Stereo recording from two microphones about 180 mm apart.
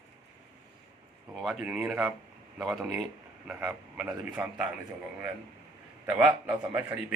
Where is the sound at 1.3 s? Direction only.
Centre (ahead or behind).